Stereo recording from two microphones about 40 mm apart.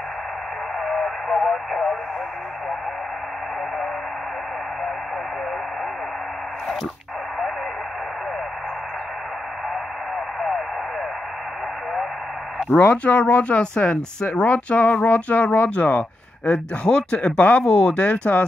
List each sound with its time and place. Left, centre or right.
0.7 s radio: centre
10.1 s radio: centre
12.8 s speech: left
17.4 s speech: left